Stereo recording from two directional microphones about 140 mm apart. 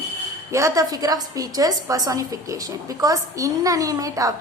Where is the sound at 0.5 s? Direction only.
25° right (ahead or behind).